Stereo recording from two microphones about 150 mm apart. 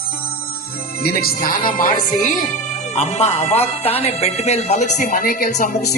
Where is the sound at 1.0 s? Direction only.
90° left.